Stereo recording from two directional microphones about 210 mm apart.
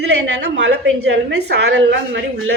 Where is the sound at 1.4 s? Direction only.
55° right (ahead or behind).